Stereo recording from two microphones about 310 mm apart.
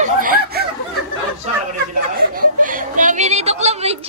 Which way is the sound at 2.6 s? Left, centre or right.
Right.